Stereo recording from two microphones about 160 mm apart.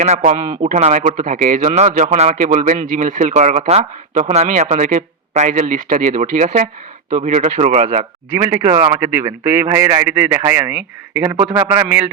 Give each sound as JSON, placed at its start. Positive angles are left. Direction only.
{"t": 0.0, "sound": "a man's voice", "side_deg": -45}
{"t": 8.3, "sound": "a man's voice", "side_deg": -15}